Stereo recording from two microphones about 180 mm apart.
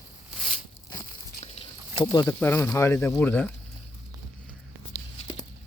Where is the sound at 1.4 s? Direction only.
30° left (ahead or behind).